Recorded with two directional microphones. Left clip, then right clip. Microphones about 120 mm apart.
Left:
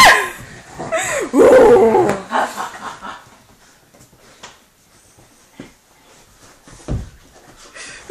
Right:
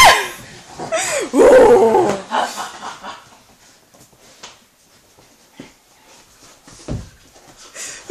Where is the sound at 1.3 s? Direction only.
20° right (ahead or behind).